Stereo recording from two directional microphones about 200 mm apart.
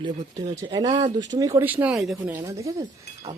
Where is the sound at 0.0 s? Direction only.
20° right (ahead or behind).